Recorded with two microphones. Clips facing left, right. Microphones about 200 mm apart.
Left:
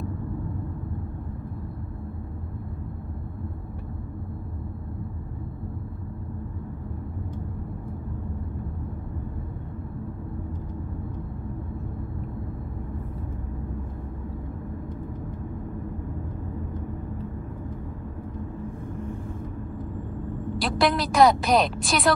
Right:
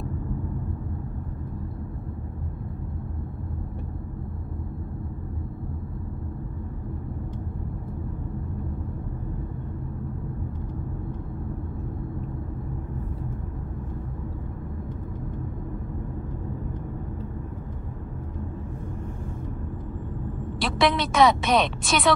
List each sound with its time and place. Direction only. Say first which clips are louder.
20.5 s a woman's voice: even; centre (ahead or behind)